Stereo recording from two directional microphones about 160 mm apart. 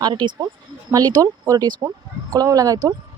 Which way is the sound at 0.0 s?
30° right (ahead or behind).